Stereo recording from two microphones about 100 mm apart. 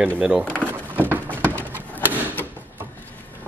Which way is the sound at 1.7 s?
20° left (ahead or behind).